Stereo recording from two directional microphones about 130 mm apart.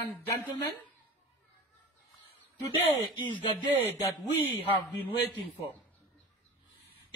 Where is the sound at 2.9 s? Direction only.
40° left (ahead or behind).